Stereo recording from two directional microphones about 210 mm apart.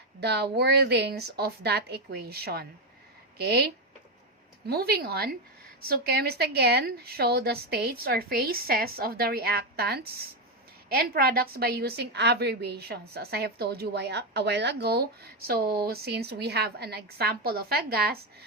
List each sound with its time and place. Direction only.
0.2 s a woman's voice: 50° right (ahead or behind)